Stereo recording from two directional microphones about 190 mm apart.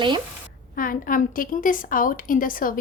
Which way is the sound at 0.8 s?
45° left (ahead or behind).